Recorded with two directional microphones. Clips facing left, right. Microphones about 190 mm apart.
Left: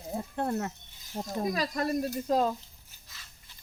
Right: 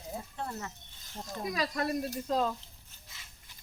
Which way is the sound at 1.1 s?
40° left (ahead or behind).